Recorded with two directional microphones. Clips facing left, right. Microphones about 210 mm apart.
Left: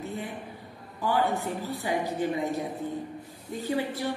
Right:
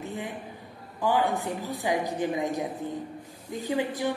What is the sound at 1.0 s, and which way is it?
Speech, 15° right (ahead or behind).